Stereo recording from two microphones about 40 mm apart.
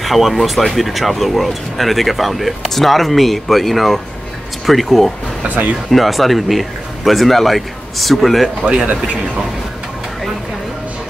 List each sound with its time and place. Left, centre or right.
0.0 s speech: centre
8.8 s speech: right